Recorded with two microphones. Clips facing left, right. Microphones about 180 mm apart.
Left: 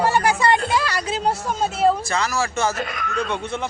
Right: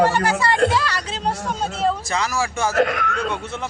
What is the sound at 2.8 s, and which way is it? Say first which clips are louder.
Speech: right 8 dB; 70° right (ahead or behind).